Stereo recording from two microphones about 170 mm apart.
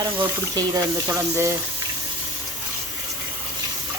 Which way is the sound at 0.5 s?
15° right (ahead or behind).